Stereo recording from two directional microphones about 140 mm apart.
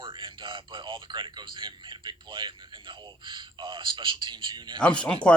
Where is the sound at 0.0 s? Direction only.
35° right (ahead or behind).